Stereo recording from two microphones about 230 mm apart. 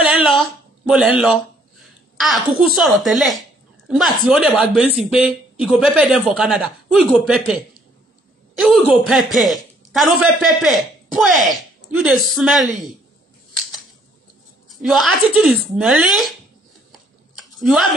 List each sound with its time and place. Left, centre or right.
0.0 s a sound: centre
0.4 s a child's voice: centre
14.7 s a woman's voice: centre
17.6 s speech: centre